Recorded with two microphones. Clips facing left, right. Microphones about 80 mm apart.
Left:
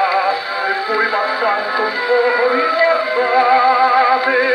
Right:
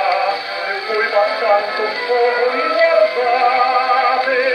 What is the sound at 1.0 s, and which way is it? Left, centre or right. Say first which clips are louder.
Music: right 5 dB; left.